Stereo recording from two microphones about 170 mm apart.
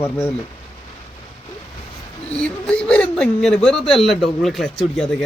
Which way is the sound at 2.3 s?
5° left (ahead or behind).